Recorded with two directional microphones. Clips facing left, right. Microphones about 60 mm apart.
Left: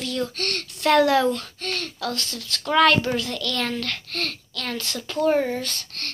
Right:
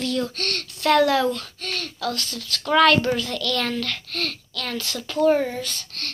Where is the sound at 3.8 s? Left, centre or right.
Left.